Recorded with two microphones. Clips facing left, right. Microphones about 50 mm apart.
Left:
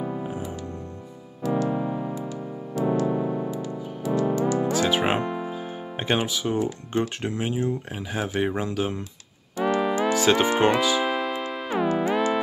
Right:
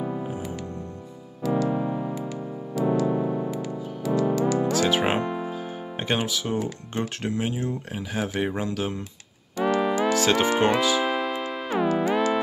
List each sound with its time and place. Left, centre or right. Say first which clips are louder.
0.0 s music: even; centre
1.4 s keyboard: even; centre
2.8 s music: even; centre
6.9 s speech: left 2 dB; centre
9.6 s music: even; centre